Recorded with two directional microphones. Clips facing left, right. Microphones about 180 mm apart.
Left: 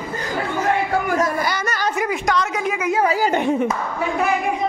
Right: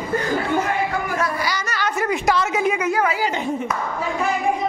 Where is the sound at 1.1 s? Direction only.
45° left (ahead or behind).